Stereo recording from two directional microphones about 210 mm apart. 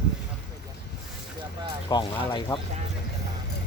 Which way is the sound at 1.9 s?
20° left (ahead or behind).